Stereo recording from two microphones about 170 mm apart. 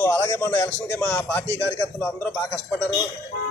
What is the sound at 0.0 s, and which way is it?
A man's voice, 15° left (ahead or behind).